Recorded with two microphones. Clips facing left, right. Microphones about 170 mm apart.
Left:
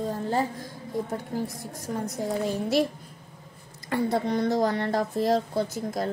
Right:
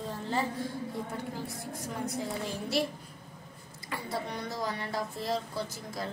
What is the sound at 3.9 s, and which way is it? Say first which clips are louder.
A woman's voice: left 11 dB; 45° left (ahead or behind).